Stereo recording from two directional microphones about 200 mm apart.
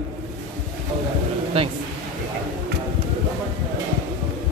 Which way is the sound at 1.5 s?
30° right (ahead or behind).